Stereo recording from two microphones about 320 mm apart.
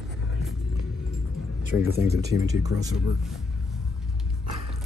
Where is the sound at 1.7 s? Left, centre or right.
Left.